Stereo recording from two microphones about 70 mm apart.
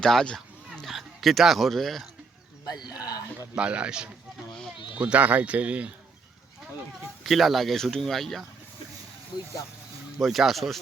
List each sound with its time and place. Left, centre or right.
0.0 s a sound: centre
0.9 s speech: centre
2.6 s speech: left
3.1 s a man's voice: left
3.5 s speech: centre
7.3 s speech: centre
10.2 s speech: centre